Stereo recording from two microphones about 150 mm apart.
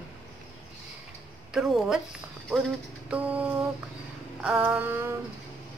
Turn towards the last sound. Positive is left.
turn(degrees=-15)  # may be behind; listen again after turning